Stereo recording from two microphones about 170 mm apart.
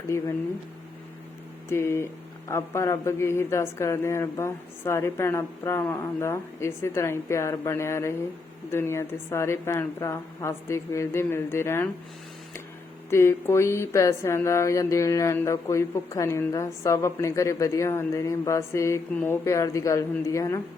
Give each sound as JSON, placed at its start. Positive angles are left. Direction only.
{"t": 0.1, "sound": "speech", "side_deg": 15}
{"t": 1.7, "sound": "speech", "side_deg": 15}
{"t": 13.1, "sound": "speech", "side_deg": 15}